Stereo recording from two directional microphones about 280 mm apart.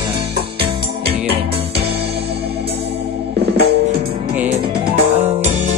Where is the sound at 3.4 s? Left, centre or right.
Right.